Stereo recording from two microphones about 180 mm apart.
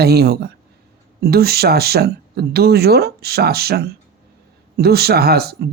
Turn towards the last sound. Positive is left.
turn(degrees=-60)  # may be behind; listen again after turning